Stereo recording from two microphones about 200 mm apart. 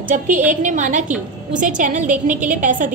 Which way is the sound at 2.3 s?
5° right (ahead or behind).